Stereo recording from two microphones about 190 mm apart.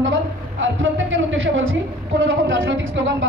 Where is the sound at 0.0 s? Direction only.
85° right.